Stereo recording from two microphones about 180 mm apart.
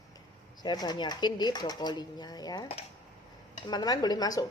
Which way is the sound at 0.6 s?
25° left (ahead or behind).